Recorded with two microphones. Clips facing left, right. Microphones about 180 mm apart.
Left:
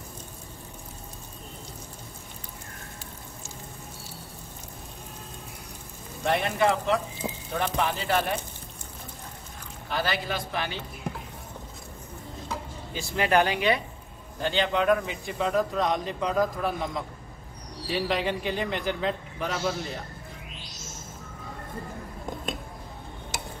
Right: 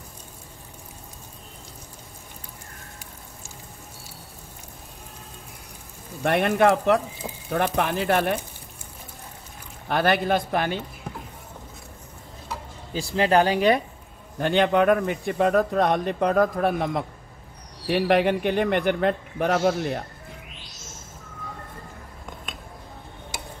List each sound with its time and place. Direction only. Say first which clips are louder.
6.2 s a man's voice: right 5 dB; 60° right (ahead or behind)
9.8 s a man's voice: right 8 dB; 60° right (ahead or behind)
12.9 s speech: right 4 dB; 30° right (ahead or behind)
14.4 s a man's voice: right 6 dB; 55° right (ahead or behind)